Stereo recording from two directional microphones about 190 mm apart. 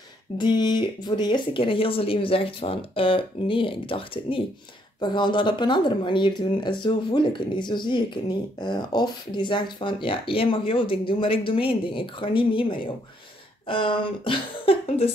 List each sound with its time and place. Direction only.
0.4 s speech: 20° left (ahead or behind)